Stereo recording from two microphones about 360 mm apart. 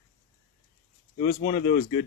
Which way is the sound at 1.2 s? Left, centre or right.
Centre.